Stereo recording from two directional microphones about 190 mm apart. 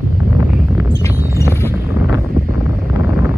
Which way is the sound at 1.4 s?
15° left (ahead or behind).